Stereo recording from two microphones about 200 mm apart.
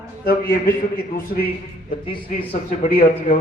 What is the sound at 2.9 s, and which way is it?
Speech, 40° left (ahead or behind).